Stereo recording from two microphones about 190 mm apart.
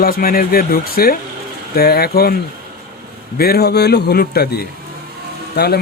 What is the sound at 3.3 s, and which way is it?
A man's voice, 55° left (ahead or behind).